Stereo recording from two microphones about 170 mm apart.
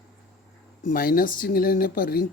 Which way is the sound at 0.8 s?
55° left (ahead or behind).